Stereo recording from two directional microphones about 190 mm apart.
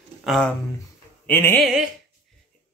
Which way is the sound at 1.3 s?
10° left (ahead or behind).